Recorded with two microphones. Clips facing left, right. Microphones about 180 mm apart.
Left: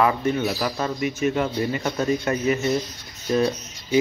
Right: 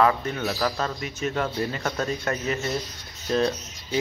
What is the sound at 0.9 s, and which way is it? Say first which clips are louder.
Speech: left 5 dB; 10° left (ahead or behind).